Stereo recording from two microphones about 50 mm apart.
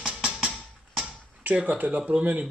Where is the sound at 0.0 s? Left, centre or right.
Centre.